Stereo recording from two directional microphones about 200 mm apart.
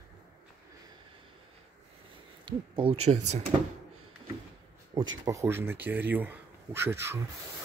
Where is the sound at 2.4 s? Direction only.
25° right (ahead or behind).